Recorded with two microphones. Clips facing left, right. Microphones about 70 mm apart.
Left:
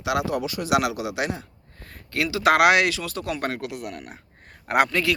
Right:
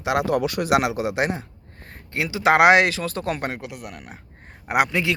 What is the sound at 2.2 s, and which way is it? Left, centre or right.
Speech, right.